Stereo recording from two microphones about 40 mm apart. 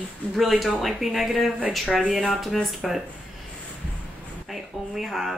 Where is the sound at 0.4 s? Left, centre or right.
Centre.